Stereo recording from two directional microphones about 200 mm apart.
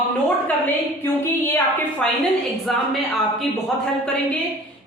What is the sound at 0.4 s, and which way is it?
A woman's voice, 10° left (ahead or behind).